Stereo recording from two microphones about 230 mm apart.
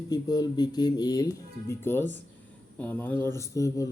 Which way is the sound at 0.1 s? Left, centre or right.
Centre.